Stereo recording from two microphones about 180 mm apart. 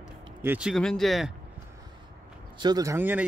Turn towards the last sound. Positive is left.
turn(degrees=-10)  # may be behind; listen again after turning